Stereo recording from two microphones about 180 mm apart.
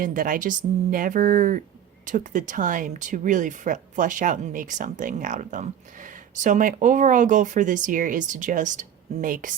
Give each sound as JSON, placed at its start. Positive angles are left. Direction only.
{"t": 0.0, "sound": "speech", "side_deg": -50}